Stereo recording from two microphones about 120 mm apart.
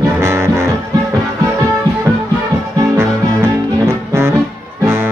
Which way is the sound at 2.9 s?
20° right (ahead or behind).